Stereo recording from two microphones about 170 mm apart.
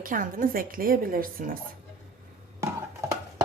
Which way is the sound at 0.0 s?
50° right (ahead or behind).